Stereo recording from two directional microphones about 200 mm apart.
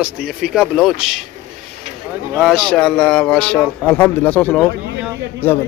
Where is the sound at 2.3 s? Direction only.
Centre (ahead or behind).